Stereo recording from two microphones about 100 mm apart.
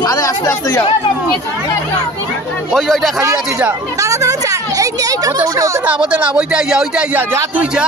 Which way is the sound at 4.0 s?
35° right (ahead or behind).